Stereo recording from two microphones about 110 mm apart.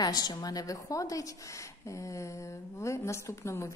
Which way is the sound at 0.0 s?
35° left (ahead or behind).